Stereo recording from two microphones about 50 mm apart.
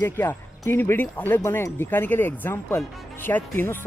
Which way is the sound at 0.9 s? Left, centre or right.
Left.